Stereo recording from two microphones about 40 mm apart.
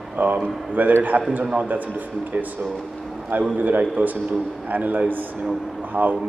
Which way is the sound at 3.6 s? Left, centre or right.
Right.